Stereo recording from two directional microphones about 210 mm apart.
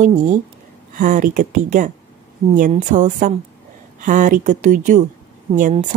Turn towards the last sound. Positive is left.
turn(degrees=-35)  # may be behind; listen again after turning